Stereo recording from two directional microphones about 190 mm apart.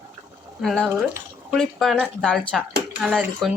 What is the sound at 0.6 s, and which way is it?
Speech, centre (ahead or behind).